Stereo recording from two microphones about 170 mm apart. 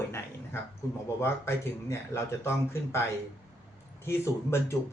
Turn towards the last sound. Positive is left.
turn(degrees=15)  # may be behind; listen again after turning